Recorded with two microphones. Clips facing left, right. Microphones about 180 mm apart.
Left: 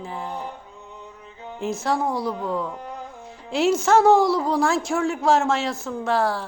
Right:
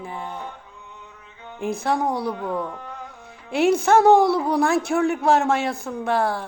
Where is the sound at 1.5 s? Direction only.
15° right (ahead or behind).